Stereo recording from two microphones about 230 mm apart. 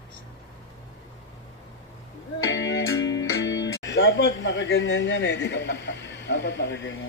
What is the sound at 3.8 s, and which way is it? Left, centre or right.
Speech, left.